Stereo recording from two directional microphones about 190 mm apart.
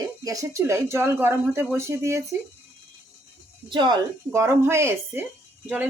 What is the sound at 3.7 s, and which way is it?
Speech, 25° right (ahead or behind).